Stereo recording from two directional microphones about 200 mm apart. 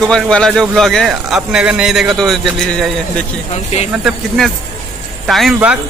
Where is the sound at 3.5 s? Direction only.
30° left (ahead or behind).